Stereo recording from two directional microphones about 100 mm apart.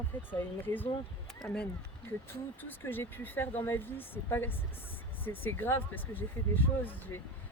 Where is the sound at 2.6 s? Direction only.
20° left (ahead or behind).